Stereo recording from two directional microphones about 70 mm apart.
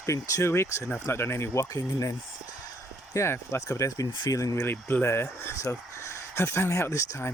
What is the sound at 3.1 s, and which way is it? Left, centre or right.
Speech, left.